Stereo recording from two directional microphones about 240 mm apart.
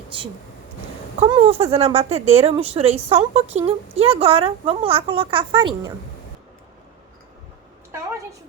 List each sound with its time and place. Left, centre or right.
1.2 s speech: right